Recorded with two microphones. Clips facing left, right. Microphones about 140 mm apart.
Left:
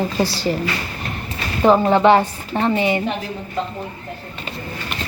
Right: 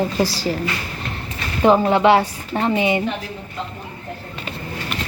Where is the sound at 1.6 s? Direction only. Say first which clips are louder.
Left 1 dB; 5° right (ahead or behind).